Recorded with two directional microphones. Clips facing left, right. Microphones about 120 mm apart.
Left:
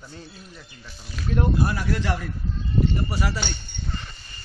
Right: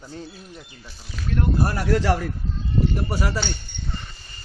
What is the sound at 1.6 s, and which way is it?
Speech, 45° right (ahead or behind).